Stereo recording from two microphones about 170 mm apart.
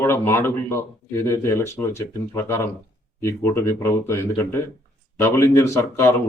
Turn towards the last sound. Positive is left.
turn(degrees=15)  # may be behind; listen again after turning